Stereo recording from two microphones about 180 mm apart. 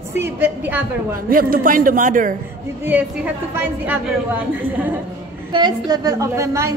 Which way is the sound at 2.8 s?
10° right (ahead or behind).